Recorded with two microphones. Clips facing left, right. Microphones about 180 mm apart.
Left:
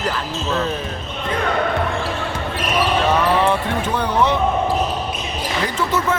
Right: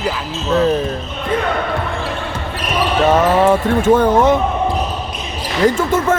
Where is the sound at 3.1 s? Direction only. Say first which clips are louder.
Right 5 dB; 45° right (ahead or behind).